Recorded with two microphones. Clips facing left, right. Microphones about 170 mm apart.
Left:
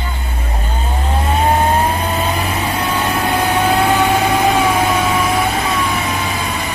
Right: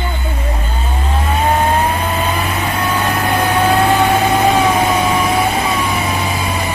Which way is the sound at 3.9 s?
10° right (ahead or behind).